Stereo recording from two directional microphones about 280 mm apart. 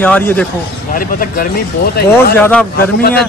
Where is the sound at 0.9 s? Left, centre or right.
Left.